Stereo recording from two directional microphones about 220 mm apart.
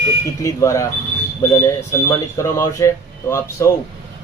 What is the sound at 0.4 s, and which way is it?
Speech, 15° left (ahead or behind).